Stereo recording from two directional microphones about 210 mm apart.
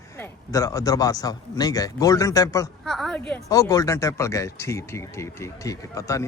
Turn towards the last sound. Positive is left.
turn(degrees=15)  # may be behind; listen again after turning